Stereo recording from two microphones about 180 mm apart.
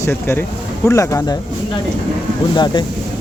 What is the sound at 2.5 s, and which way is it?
Speech, 25° left (ahead or behind).